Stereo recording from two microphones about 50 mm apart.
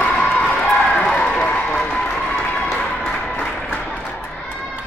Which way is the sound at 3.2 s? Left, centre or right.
Left.